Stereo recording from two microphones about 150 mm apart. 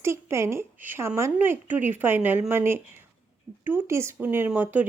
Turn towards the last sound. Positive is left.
turn(degrees=-10)  # may be behind; listen again after turning